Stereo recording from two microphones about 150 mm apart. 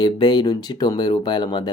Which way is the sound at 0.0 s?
30° left (ahead or behind).